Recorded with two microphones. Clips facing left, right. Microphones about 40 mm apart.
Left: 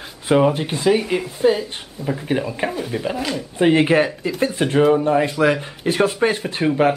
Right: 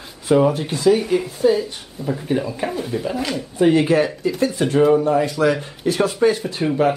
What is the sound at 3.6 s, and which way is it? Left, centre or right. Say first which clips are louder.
Speech: even; left.